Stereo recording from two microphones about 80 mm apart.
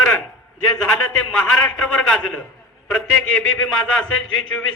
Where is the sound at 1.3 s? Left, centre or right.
Centre.